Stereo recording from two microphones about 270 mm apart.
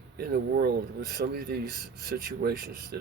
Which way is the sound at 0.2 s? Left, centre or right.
Right.